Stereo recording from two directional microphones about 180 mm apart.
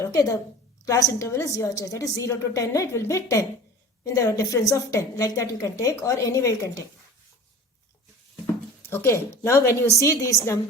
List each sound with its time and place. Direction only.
0.0 s a woman's voice: 20° left (ahead or behind)
8.8 s a woman's voice: 10° left (ahead or behind)